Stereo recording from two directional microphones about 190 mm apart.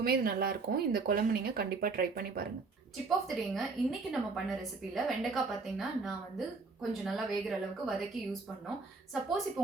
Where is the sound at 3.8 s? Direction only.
Centre (ahead or behind).